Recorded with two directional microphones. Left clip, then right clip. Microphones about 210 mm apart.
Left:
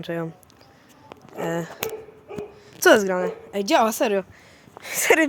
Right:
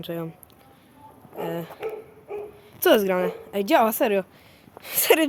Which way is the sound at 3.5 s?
Centre (ahead or behind).